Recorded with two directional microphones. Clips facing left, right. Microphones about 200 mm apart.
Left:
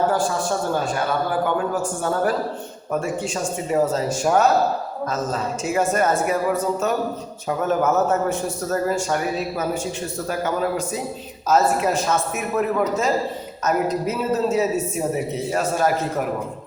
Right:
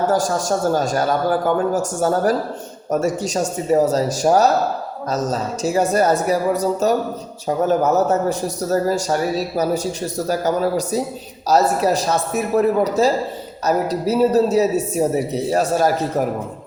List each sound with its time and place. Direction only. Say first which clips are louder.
0.1 s a man's voice: right 3 dB; 40° right (ahead or behind)